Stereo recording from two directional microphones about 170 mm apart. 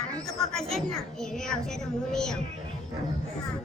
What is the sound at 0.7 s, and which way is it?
A child's voice, centre (ahead or behind).